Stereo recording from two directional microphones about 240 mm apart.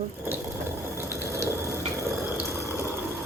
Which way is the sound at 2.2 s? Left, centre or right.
Centre.